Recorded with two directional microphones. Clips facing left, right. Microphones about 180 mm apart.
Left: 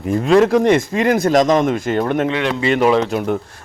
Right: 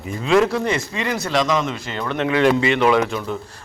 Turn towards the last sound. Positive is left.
turn(degrees=60)  # may be behind; listen again after turning